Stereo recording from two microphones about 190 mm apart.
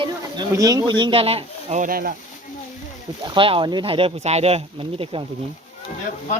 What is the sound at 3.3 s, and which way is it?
Speech, 25° right (ahead or behind).